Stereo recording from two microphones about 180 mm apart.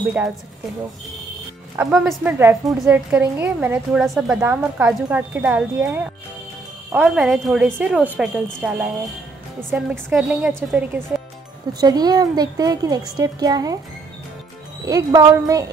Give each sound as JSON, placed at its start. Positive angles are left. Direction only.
{"t": 1.8, "sound": "a woman's voice", "side_deg": -5}
{"t": 11.8, "sound": "a woman's voice", "side_deg": -20}
{"t": 14.9, "sound": "a woman's voice", "side_deg": -20}